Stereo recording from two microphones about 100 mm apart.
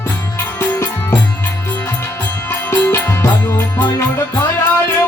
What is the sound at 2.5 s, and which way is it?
Music, 25° left (ahead or behind).